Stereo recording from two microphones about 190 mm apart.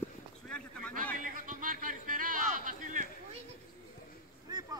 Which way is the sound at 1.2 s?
45° right (ahead or behind).